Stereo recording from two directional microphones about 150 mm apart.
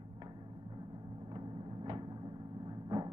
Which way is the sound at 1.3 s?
35° right (ahead or behind).